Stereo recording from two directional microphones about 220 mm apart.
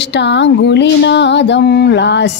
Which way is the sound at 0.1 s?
55° left (ahead or behind).